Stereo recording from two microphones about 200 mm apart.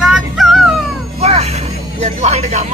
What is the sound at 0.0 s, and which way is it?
Dog, centre (ahead or behind).